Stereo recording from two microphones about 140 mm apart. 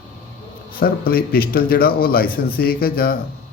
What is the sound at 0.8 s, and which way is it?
A man's voice, 90° left.